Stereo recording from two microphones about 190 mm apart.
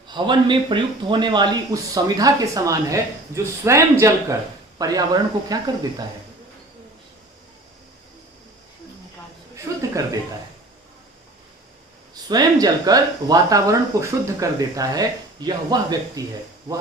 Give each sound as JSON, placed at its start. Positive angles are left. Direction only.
{"t": 0.1, "sound": "speech", "side_deg": -25}
{"t": 9.7, "sound": "a sound", "side_deg": -20}
{"t": 12.1, "sound": "speech", "side_deg": -20}